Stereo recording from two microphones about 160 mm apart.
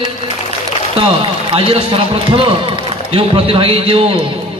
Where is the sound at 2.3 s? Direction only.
30° right (ahead or behind).